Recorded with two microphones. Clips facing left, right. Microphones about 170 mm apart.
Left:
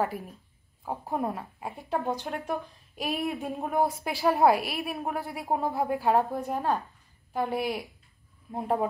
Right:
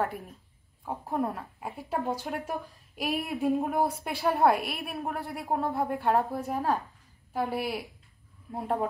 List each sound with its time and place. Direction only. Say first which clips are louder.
0.0 s a woman's voice: left 2 dB; centre (ahead or behind)